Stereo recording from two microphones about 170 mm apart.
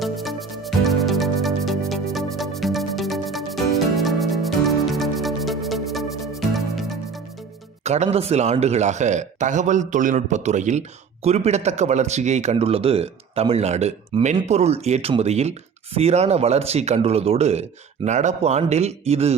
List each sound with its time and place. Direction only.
0.0 s music: centre (ahead or behind)
7.9 s speech: 40° right (ahead or behind)